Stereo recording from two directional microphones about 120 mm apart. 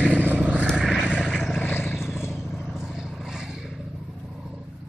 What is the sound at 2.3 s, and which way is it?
Vehicle, 5° right (ahead or behind).